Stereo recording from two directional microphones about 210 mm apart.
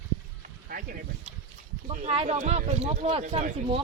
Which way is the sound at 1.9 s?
30° right (ahead or behind).